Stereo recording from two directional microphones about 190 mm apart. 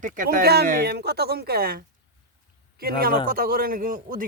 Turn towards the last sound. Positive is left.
turn(degrees=-45)  # may be behind; listen again after turning